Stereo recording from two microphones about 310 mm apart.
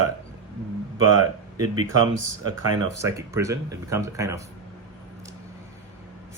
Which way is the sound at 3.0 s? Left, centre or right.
Centre.